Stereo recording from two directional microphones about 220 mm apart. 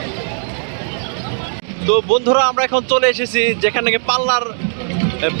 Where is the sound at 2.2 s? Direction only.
50° right (ahead or behind).